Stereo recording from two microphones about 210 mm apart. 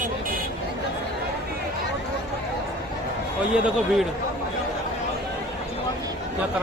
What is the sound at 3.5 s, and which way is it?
Speech, 5° right (ahead or behind).